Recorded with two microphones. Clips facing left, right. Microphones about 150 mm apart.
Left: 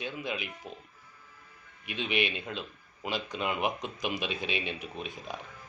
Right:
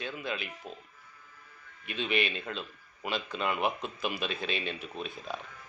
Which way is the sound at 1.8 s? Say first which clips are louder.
Even; 15° left (ahead or behind).